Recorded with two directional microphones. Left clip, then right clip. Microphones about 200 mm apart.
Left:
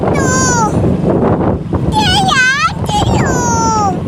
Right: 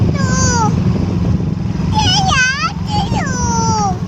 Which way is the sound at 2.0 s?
35° left (ahead or behind).